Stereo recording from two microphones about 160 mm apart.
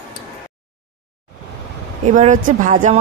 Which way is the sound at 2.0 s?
50° right (ahead or behind).